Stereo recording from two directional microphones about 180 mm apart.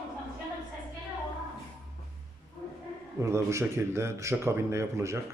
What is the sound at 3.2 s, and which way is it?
Speech, 15° right (ahead or behind).